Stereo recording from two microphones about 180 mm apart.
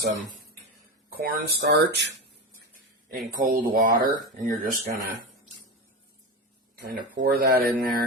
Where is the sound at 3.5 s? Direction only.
55° right (ahead or behind).